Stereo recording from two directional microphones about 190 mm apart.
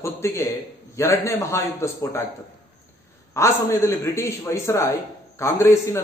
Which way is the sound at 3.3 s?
15° left (ahead or behind).